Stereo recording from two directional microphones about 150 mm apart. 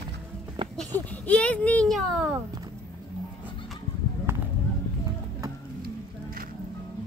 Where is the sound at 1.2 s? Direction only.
10° left (ahead or behind).